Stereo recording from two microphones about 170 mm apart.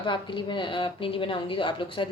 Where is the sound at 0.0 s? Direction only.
30° left (ahead or behind).